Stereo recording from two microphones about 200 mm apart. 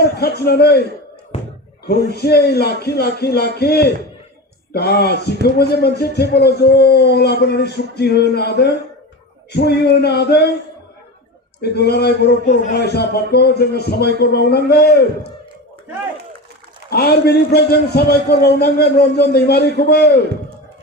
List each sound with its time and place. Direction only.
0.0 s a man's voice: 55° left (ahead or behind)
1.3 s a sound: 30° left (ahead or behind)
1.9 s a man's voice: 55° left (ahead or behind)
11.6 s a man's voice: 55° left (ahead or behind)
16.9 s a man's voice: 50° left (ahead or behind)